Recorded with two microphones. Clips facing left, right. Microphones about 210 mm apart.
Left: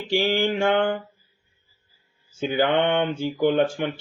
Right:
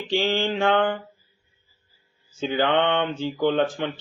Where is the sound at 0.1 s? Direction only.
10° left (ahead or behind).